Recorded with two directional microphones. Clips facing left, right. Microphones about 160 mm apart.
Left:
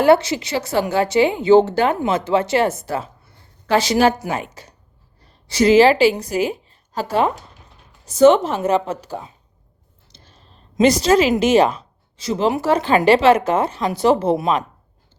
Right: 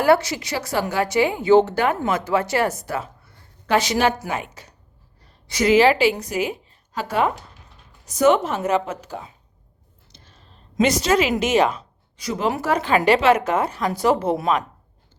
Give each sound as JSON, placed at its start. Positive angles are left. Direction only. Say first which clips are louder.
{"t": 0.0, "sound": "a woman's voice", "louder": "left 4 dB", "side_deg": 25}